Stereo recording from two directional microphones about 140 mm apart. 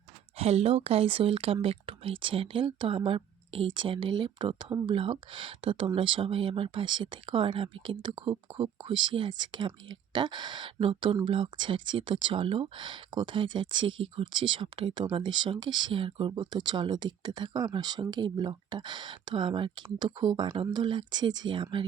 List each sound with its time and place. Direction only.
0.3 s speech: 45° right (ahead or behind)